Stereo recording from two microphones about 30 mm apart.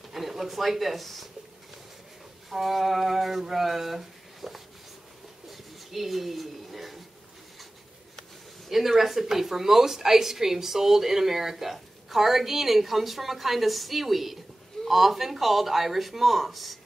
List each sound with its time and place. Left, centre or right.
0.1 s speech: centre
2.5 s a woman's voice: centre
5.5 s a sound: centre
8.6 s a woman's voice: centre